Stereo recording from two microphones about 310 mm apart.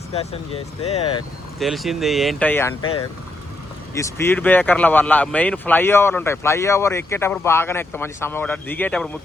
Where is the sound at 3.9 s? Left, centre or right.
Centre.